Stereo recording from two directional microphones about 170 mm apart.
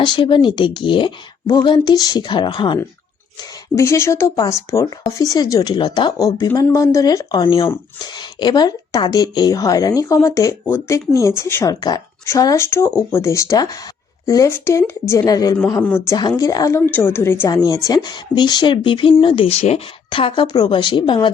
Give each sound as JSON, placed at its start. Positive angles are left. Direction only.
{"t": 0.0, "sound": "speech", "side_deg": 30}
{"t": 3.8, "sound": "a woman's voice", "side_deg": 15}
{"t": 15.8, "sound": "a woman's voice", "side_deg": 10}
{"t": 16.4, "sound": "a woman's voice", "side_deg": 20}